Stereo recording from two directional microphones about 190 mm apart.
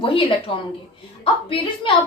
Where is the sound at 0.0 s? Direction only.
25° left (ahead or behind).